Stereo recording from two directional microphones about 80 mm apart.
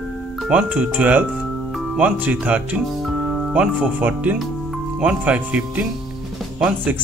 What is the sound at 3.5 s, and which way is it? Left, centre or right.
Speech, centre.